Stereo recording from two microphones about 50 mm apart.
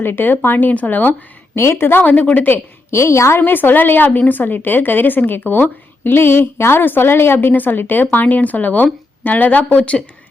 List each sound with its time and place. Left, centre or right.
0.0 s a woman's voice: left
1.5 s a woman's voice: left
2.0 s a woman's voice: left
2.9 s a woman's voice: left
3.4 s a woman's voice: left
7.5 s a woman's voice: left